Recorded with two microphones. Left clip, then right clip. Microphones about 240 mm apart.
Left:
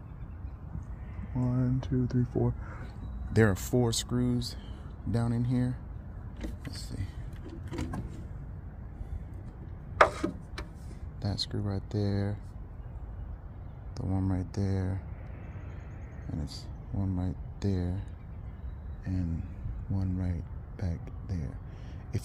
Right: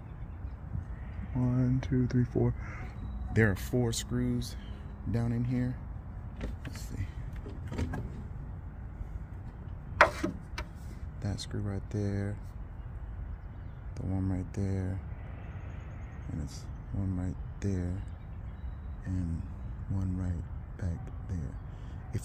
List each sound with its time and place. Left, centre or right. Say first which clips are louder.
1.4 s speech: even; centre
3.3 s speech: left 3 dB; left
9.9 s tick-tock: left 1 dB; centre
11.1 s speech: left 5 dB; centre
13.9 s speech: left 2 dB; centre
16.3 s speech: left 3 dB; centre
19.0 s speech: left 2 dB; centre
20.7 s music: left 2 dB; centre
22.1 s speech: left 3 dB; centre